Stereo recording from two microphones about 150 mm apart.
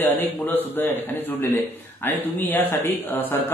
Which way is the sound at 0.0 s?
15° left (ahead or behind).